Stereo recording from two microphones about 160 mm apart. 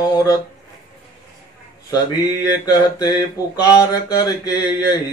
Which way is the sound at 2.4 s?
25° left (ahead or behind).